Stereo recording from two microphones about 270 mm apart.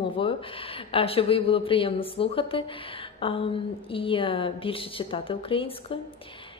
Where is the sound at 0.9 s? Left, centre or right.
Left.